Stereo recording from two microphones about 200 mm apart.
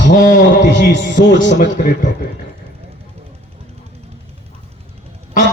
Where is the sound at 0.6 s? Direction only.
60° left (ahead or behind).